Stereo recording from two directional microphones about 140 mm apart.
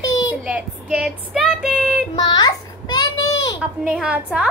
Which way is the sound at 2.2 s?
30° left (ahead or behind).